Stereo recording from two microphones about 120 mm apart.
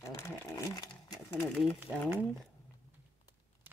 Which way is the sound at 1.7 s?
15° right (ahead or behind).